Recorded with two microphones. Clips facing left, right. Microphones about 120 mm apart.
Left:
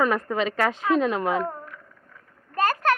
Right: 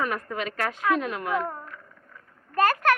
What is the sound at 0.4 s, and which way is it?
Speech, 25° left (ahead or behind).